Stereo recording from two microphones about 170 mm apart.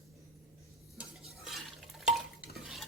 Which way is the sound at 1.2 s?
Centre (ahead or behind).